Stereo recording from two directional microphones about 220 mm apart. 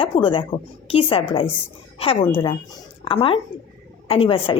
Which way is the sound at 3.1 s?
25° left (ahead or behind).